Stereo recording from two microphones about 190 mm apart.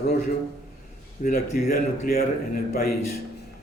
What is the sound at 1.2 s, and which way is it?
A man's voice, 50° left (ahead or behind).